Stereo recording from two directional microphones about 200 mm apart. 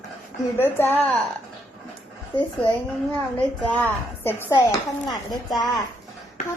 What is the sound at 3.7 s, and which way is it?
Speech, 5° left (ahead or behind).